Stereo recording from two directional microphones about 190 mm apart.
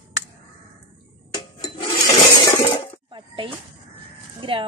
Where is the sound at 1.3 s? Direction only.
25° left (ahead or behind).